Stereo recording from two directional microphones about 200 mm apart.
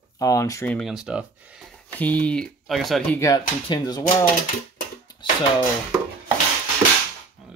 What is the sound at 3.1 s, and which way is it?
Speech, 20° left (ahead or behind).